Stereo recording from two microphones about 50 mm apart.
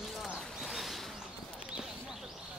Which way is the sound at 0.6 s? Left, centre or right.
Centre.